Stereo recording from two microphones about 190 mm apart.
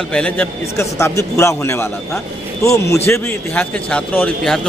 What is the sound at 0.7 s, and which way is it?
A man's voice, 15° left (ahead or behind).